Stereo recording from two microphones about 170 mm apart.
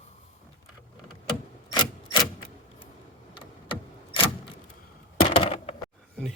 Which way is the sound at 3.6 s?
30° left (ahead or behind).